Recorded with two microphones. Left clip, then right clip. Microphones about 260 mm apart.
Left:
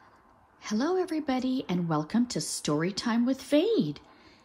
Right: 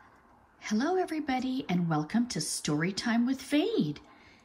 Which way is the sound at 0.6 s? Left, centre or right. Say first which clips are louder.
Left 1 dB; centre.